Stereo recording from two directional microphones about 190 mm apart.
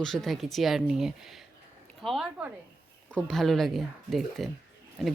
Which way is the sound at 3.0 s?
5° left (ahead or behind).